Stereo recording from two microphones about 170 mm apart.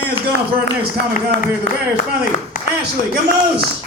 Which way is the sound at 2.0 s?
50° left (ahead or behind).